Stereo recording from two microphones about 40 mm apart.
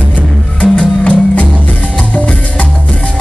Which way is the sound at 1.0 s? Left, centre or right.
Left.